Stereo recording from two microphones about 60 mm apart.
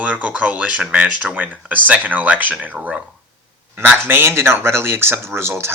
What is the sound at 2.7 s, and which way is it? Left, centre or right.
Speech, centre.